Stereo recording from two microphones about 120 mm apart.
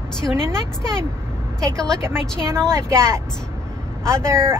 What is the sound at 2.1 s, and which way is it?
Speech, 5° left (ahead or behind).